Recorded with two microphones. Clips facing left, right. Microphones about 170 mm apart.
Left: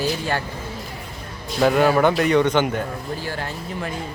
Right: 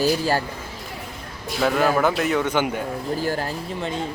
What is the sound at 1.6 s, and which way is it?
A man's voice, centre (ahead or behind).